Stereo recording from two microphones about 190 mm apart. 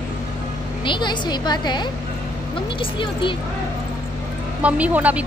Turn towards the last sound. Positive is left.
turn(degrees=-5)  # may be behind; listen again after turning